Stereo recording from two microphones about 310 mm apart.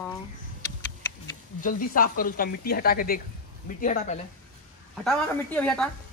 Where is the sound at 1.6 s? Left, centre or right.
Left.